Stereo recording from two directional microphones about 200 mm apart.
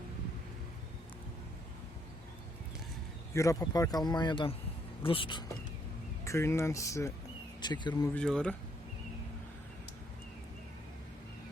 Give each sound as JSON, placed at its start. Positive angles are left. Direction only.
{"t": 3.3, "sound": "speech", "side_deg": 15}
{"t": 6.2, "sound": "speech", "side_deg": 15}
{"t": 8.1, "sound": "speech", "side_deg": 5}